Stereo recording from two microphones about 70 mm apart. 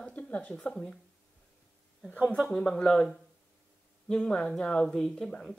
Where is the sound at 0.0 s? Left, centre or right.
Centre.